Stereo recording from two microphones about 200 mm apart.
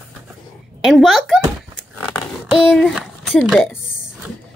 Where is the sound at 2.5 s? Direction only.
Centre (ahead or behind).